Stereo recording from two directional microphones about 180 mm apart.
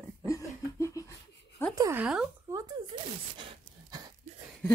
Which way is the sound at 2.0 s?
5° right (ahead or behind).